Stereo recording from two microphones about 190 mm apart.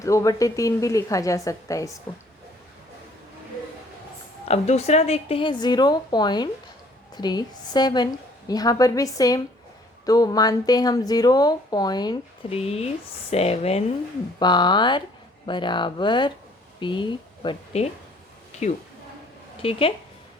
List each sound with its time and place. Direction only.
0.0 s a woman's voice: 15° left (ahead or behind)
4.4 s speech: 35° left (ahead or behind)
14.3 s speech: 25° left (ahead or behind)
19.6 s speech: 30° left (ahead or behind)